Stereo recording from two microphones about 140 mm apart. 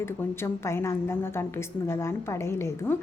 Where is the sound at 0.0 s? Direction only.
20° left (ahead or behind).